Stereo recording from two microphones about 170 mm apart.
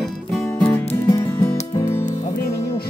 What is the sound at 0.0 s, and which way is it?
Music, 5° left (ahead or behind).